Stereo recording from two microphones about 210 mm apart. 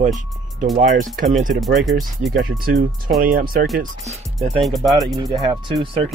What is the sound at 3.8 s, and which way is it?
Speech, 30° right (ahead or behind).